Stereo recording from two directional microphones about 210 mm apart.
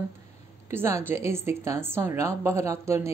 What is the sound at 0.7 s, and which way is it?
A woman's voice, 10° right (ahead or behind).